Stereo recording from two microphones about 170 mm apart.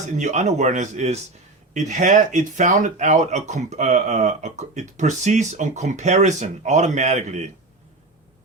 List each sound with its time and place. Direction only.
0.2 s speech: 45° right (ahead or behind)